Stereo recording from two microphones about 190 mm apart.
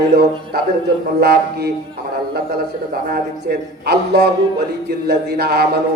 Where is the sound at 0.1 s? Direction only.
55° right (ahead or behind).